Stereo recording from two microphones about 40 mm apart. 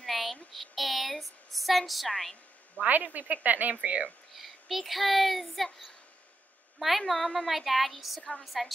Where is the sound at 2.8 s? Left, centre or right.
Right.